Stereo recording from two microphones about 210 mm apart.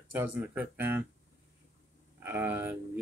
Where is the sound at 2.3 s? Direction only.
10° right (ahead or behind).